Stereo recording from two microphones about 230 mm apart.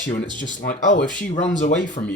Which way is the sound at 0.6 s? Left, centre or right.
Left.